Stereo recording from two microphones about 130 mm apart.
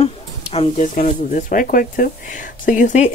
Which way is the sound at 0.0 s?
50° left (ahead or behind).